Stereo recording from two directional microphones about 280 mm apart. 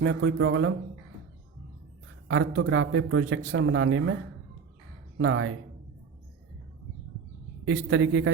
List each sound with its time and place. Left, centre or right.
0.0 s a man's voice: right
2.2 s a man's voice: right
5.1 s a man's voice: right
7.6 s a man's voice: right